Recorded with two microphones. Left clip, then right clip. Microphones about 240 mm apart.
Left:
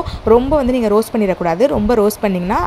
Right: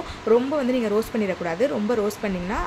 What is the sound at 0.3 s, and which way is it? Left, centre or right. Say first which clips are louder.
Speech: left 8 dB; left.